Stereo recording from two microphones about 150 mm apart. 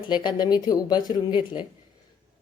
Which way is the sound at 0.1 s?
30° left (ahead or behind).